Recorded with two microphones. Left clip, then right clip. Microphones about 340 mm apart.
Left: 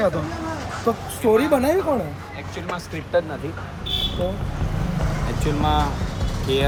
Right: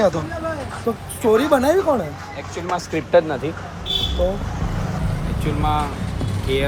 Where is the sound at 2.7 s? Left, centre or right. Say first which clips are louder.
Right 7 dB; right.